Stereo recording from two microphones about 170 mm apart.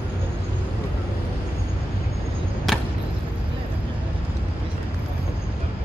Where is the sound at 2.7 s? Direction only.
Centre (ahead or behind).